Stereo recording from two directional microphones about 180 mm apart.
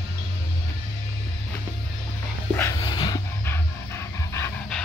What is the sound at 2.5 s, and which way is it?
Dog, 15° left (ahead or behind).